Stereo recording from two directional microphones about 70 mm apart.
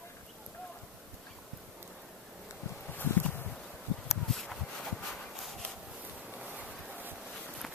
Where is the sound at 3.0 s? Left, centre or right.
Left.